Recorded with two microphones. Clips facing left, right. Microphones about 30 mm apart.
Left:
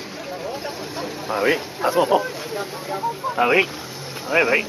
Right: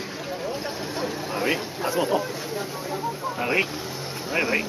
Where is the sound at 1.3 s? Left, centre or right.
Centre.